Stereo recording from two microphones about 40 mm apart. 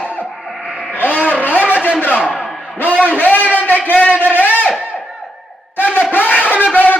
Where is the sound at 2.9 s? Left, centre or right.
Right.